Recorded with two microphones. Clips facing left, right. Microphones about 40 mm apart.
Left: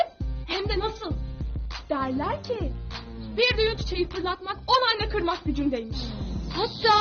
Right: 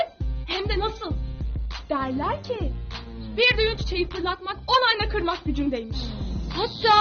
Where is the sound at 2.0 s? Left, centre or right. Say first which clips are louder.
Even; right.